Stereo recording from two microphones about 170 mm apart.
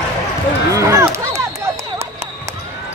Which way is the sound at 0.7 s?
20° right (ahead or behind).